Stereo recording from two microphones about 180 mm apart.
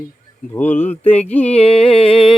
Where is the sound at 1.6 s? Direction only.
30° left (ahead or behind).